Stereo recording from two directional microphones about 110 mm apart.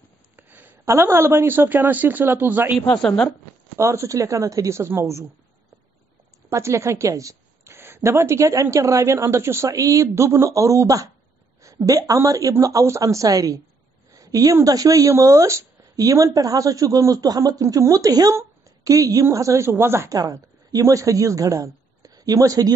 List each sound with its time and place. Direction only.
0.4 s speech: 15° right (ahead or behind)
2.9 s a woman's voice: 10° left (ahead or behind)
3.7 s a woman's voice: 25° right (ahead or behind)
6.5 s a woman's voice: 25° right (ahead or behind)